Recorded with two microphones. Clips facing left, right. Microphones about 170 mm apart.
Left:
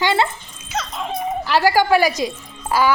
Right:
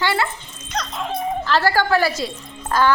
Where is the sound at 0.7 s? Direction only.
5° left (ahead or behind).